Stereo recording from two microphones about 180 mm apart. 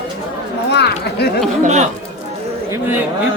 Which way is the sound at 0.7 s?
70° left (ahead or behind).